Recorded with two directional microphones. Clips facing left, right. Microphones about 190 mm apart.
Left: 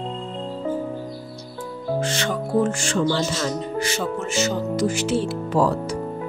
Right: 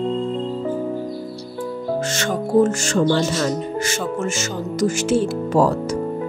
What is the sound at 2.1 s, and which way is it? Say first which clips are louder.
Speech: right 3 dB; 45° right (ahead or behind).